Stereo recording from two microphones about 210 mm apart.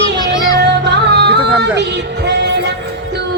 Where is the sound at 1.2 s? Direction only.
55° right (ahead or behind).